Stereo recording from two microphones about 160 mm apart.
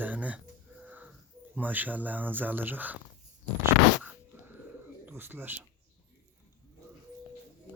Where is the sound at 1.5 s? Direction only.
10° right (ahead or behind).